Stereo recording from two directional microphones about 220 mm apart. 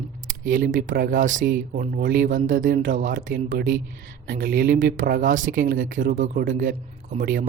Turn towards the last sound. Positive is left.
turn(degrees=-40)  # may be behind; listen again after turning